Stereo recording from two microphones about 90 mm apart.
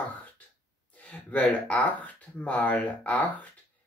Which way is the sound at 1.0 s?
15° left (ahead or behind).